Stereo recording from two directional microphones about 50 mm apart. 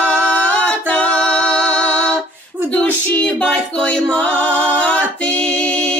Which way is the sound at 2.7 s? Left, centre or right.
Left.